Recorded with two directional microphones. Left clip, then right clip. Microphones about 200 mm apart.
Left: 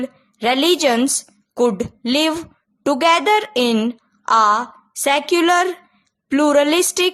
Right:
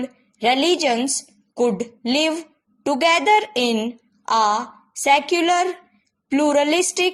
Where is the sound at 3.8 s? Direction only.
25° left (ahead or behind).